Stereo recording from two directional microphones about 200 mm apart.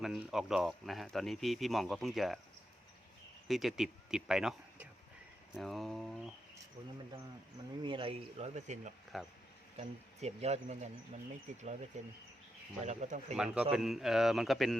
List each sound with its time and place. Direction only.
0.0 s speech: centre (ahead or behind)
3.5 s speech: centre (ahead or behind)
7.8 s speech: 25° right (ahead or behind)
9.1 s speech: centre (ahead or behind)
10.2 s speech: 35° right (ahead or behind)
13.3 s speech: 5° right (ahead or behind)